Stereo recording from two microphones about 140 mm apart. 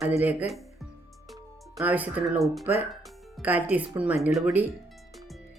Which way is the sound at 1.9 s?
10° right (ahead or behind).